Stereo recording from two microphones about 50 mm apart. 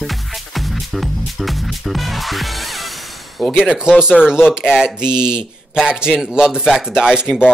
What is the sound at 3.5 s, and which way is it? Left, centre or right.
Speech, centre.